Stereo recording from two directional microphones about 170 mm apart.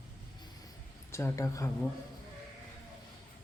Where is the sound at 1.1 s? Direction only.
15° left (ahead or behind).